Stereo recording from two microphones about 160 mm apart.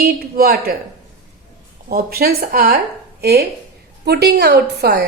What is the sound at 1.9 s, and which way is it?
A woman's voice, 65° right (ahead or behind).